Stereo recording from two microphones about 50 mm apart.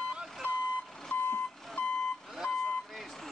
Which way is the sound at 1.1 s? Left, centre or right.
Left.